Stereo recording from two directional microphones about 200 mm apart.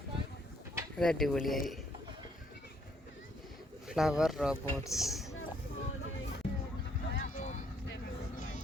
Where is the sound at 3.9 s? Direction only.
5° right (ahead or behind).